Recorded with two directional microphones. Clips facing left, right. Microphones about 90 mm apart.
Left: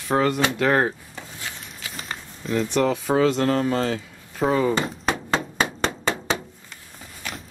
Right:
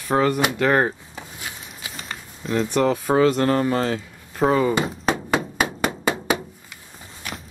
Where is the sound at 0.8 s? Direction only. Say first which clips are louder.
Right 1 dB; 15° right (ahead or behind).